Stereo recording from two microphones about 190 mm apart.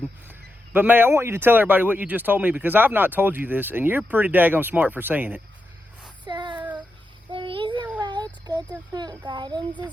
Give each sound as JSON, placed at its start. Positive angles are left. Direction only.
{"t": 0.3, "sound": "speech", "side_deg": -10}
{"t": 6.2, "sound": "child singing", "side_deg": -25}
{"t": 7.3, "sound": "a sound", "side_deg": -25}
{"t": 8.0, "sound": "child singing", "side_deg": -20}
{"t": 8.9, "sound": "a child's voice", "side_deg": -20}